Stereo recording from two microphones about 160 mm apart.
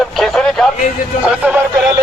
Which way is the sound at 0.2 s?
5° left (ahead or behind).